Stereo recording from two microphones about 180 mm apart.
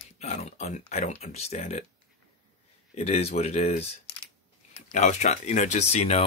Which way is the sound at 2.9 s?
35° left (ahead or behind).